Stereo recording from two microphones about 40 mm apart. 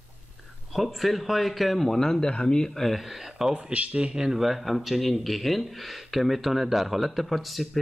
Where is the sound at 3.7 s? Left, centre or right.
Right.